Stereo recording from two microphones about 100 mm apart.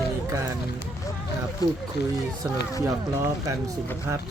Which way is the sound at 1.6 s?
40° left (ahead or behind).